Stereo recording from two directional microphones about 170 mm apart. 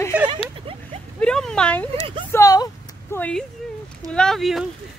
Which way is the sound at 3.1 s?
10° left (ahead or behind).